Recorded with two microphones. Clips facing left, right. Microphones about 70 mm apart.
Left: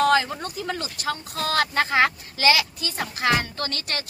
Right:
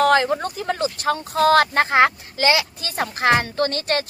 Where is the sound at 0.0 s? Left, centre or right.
Right.